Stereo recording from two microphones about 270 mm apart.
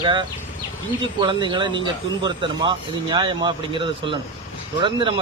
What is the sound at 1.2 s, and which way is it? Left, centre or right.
Speech, centre.